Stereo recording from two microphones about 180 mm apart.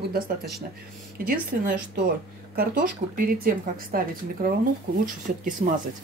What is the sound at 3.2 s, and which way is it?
Speech, 55° right (ahead or behind).